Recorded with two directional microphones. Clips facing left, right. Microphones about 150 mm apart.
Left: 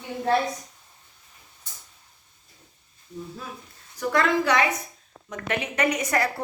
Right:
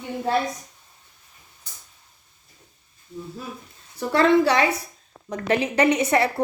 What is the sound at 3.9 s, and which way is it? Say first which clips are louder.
A woman's voice: right 5 dB; 30° right (ahead or behind).